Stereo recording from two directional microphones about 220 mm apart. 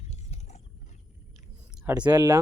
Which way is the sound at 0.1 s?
30° left (ahead or behind).